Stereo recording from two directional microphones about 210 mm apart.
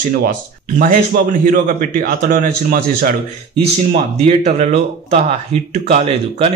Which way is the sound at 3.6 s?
30° right (ahead or behind).